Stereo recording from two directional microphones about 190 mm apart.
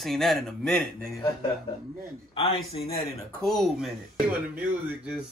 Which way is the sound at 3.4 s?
Centre (ahead or behind).